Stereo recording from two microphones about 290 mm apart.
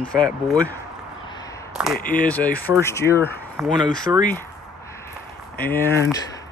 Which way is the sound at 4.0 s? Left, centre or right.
Centre.